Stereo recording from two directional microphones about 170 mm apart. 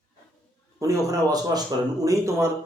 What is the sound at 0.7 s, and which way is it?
Speech, 20° right (ahead or behind).